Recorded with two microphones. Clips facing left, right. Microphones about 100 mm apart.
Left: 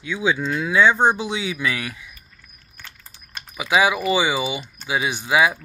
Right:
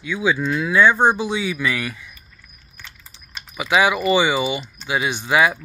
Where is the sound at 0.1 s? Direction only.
20° left (ahead or behind).